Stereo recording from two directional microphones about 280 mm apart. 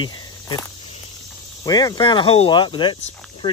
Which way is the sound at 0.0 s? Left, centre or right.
Centre.